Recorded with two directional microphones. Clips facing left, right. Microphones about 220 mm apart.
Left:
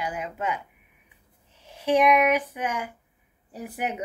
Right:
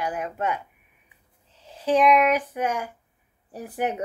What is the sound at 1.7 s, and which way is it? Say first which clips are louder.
Speech: right 1 dB; 15° left (ahead or behind).